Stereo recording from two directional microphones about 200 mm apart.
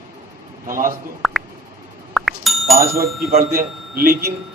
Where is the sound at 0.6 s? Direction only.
45° right (ahead or behind).